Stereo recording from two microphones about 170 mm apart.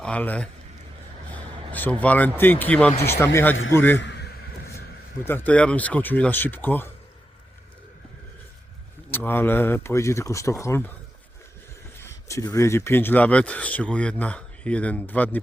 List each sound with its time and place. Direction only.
0.0 s speech: 10° left (ahead or behind)
1.7 s speech: 10° left (ahead or behind)
4.0 s a sound: 85° left; by 4.8 s 65° left (ahead or behind)
5.2 s speech: 10° left (ahead or behind)
9.0 s speech: 15° left (ahead or behind)
11.9 s speech: 20° left (ahead or behind)